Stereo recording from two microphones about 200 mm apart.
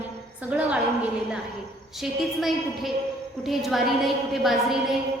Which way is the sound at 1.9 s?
Centre (ahead or behind).